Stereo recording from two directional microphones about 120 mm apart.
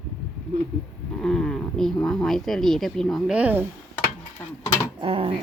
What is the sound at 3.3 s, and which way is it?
Speech, 10° right (ahead or behind).